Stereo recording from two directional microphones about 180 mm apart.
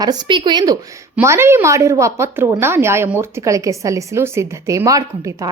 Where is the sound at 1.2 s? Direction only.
15° right (ahead or behind).